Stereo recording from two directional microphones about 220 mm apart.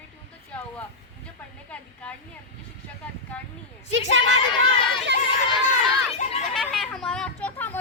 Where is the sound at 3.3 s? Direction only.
5° left (ahead or behind).